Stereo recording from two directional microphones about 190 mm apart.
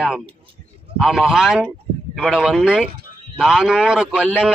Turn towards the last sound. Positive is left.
turn(degrees=-5)  # may be behind; listen again after turning